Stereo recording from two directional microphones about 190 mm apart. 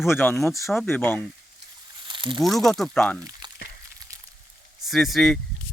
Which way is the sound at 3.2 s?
20° right (ahead or behind).